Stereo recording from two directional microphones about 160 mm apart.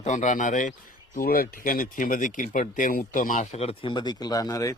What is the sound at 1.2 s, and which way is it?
Speech, 65° left (ahead or behind).